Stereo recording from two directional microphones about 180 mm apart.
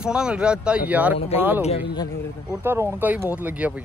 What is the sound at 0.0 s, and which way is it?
Speech, 5° right (ahead or behind).